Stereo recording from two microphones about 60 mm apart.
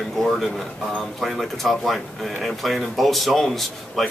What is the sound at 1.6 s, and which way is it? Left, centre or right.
Speech, centre.